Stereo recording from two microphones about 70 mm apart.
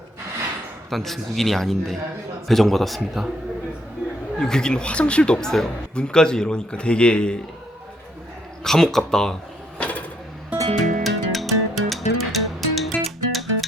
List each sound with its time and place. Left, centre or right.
0.9 s a man's voice: centre
4.4 s speech: centre
8.6 s speech: centre
9.7 s a sound: centre
10.5 s music: right
11.0 s music: centre